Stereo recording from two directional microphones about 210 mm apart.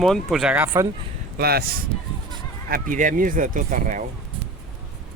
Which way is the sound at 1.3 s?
45° right (ahead or behind).